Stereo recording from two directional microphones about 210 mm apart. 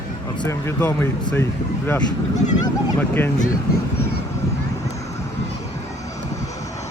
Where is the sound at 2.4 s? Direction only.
35° left (ahead or behind).